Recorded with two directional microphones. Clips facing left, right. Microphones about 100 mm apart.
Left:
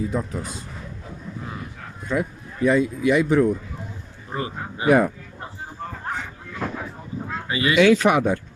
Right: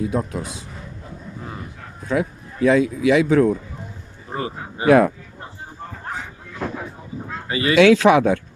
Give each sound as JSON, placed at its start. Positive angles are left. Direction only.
{"t": 0.0, "sound": "speech", "side_deg": -70}
{"t": 2.0, "sound": "speech", "side_deg": -90}
{"t": 4.3, "sound": "a man's voice", "side_deg": -30}
{"t": 4.9, "sound": "speech", "side_deg": -90}
{"t": 7.4, "sound": "speech", "side_deg": -35}
{"t": 7.8, "sound": "speech", "side_deg": -90}